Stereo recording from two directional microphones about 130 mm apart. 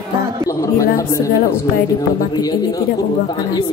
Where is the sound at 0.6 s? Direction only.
25° left (ahead or behind).